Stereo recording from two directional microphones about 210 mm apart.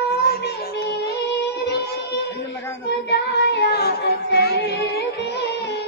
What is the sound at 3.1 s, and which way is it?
Music, 55° left (ahead or behind).